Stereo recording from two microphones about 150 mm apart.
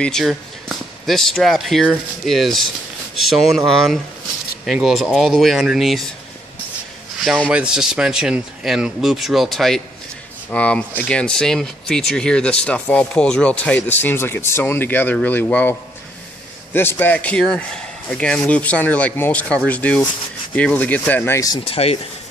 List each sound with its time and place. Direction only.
0.0 s a man's voice: centre (ahead or behind)
7.2 s a man's voice: centre (ahead or behind)
16.7 s speech: 15° left (ahead or behind)
21.6 s speech: 40° left (ahead or behind)